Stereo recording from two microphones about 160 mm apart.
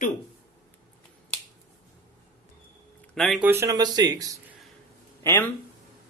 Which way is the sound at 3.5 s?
20° right (ahead or behind).